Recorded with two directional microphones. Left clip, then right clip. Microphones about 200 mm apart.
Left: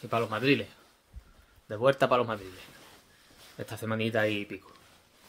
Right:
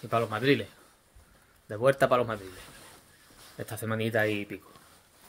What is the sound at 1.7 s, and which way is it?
Speech, 5° left (ahead or behind).